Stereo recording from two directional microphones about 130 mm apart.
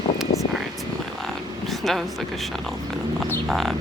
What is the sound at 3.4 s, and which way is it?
Bird, centre (ahead or behind).